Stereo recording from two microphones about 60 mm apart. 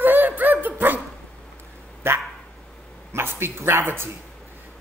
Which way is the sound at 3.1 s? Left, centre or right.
Right.